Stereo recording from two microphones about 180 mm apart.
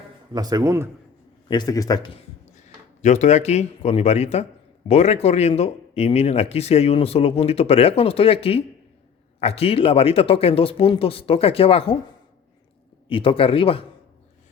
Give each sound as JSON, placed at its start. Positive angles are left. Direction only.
{"t": 0.3, "sound": "a man's voice", "side_deg": -20}
{"t": 1.5, "sound": "a man's voice", "side_deg": 20}
{"t": 2.6, "sound": "speech", "side_deg": 40}
{"t": 13.1, "sound": "speech", "side_deg": 30}